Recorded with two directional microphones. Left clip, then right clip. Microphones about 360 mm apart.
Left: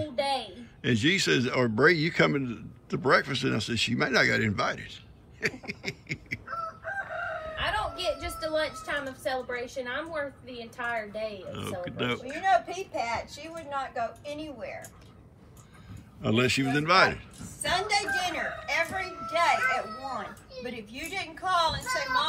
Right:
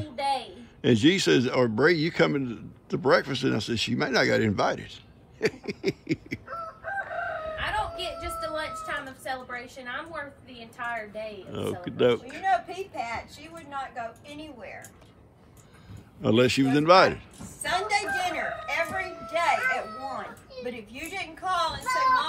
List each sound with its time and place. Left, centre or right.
0.0 s speech: centre
6.4 s chicken: right
7.5 s a sound: centre
10.8 s a woman's voice: centre
11.8 s speech: centre
12.4 s a woman's voice: centre
16.2 s a woman's voice: centre